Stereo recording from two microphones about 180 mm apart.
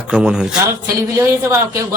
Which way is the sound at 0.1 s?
5° right (ahead or behind).